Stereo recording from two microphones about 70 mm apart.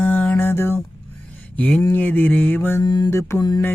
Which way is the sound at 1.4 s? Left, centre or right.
Centre.